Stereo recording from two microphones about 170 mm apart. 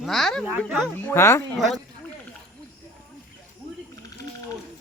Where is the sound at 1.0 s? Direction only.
15° left (ahead or behind).